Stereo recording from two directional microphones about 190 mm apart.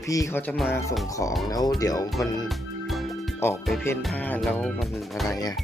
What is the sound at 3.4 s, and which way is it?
Speech, 15° left (ahead or behind).